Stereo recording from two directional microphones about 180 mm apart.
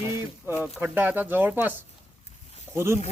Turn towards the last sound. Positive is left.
turn(degrees=-15)  # may be behind; listen again after turning